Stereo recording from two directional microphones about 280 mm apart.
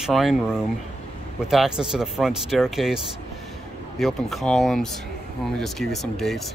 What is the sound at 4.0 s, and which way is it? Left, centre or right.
Speech, centre.